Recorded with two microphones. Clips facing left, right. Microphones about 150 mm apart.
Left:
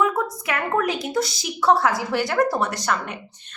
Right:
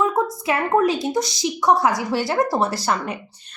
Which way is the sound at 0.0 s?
25° right (ahead or behind).